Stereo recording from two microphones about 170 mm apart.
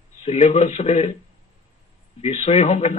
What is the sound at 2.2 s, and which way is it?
Speech, 40° left (ahead or behind).